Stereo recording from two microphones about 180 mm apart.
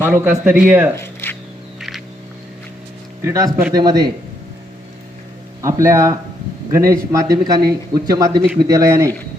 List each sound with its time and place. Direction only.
0.0 s a man's voice: 10° right (ahead or behind)
0.9 s a sound: 10° left (ahead or behind)
3.2 s a man's voice: 15° right (ahead or behind)
5.6 s a man's voice: 15° right (ahead or behind)